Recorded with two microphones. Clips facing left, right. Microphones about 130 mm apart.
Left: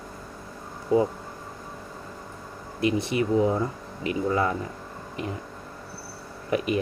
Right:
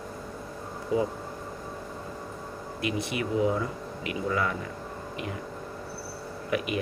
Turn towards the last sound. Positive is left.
turn(degrees=35)  # may be behind; listen again after turning